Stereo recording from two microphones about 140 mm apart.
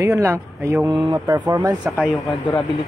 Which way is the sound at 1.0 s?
30° right (ahead or behind).